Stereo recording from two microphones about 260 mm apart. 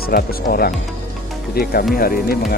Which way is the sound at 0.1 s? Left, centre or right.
Left.